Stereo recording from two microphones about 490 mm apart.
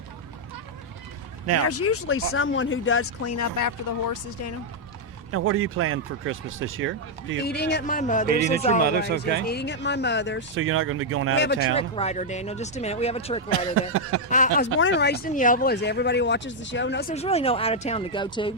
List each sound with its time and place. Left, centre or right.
1.6 s speech: left
5.3 s speech: right
7.3 s speech: centre
9.0 s speech: centre
9.5 s speech: left
10.5 s speech: right
11.3 s speech: centre